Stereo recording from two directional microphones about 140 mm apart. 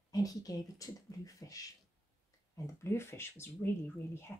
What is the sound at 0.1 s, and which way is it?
Speech, 25° left (ahead or behind).